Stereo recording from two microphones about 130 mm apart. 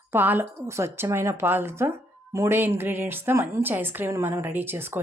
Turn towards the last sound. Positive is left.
turn(degrees=-15)  # may be behind; listen again after turning